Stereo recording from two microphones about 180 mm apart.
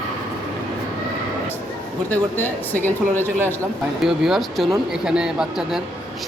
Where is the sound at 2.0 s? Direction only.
10° left (ahead or behind).